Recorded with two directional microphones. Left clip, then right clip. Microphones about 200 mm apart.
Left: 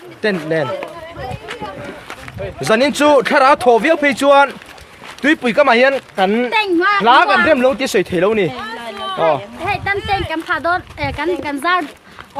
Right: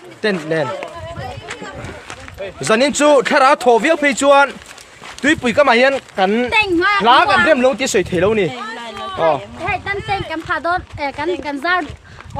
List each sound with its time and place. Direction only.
0.2 s speech: 5° right (ahead or behind)
0.7 s run: 30° right (ahead or behind)
2.6 s speech: 5° right (ahead or behind)
6.5 s speech: 40° right (ahead or behind)
7.0 s speech: 5° right (ahead or behind)
9.1 s a sound: centre (ahead or behind)
10.2 s speech: 10° left (ahead or behind)